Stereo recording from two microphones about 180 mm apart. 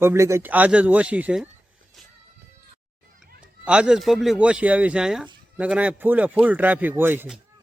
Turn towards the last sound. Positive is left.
turn(degrees=-10)  # may be behind; listen again after turning